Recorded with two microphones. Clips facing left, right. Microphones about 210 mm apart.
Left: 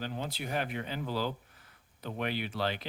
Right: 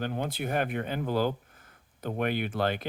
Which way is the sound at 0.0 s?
55° right (ahead or behind).